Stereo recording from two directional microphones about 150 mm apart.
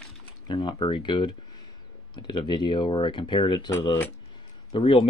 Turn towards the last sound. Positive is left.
turn(degrees=35)  # may be behind; listen again after turning